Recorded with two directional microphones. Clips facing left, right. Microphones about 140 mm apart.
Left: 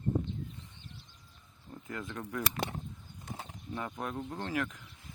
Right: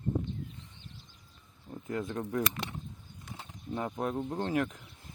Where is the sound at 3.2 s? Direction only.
40° left (ahead or behind).